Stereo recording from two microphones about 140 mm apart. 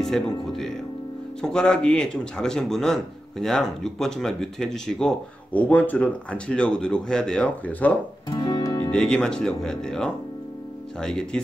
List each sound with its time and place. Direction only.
0.0 s speech: centre (ahead or behind)
8.3 s music: 30° left (ahead or behind)
8.9 s speech: 5° left (ahead or behind)